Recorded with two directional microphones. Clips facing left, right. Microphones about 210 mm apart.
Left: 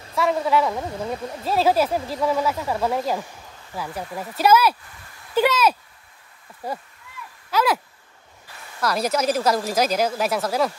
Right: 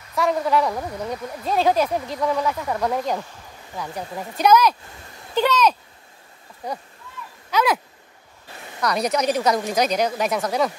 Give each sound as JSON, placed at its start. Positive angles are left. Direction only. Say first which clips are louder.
{"t": 0.1, "sound": "a woman's voice", "louder": "even", "side_deg": 0}
{"t": 0.7, "sound": "speech", "louder": "even", "side_deg": 25}
{"t": 1.4, "sound": "speech", "louder": "even", "side_deg": 5}
{"t": 8.8, "sound": "speech", "louder": "even", "side_deg": 0}